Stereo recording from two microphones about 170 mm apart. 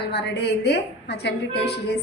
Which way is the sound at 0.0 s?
80° left.